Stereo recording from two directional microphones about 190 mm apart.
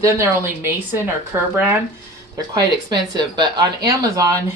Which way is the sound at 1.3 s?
15° right (ahead or behind).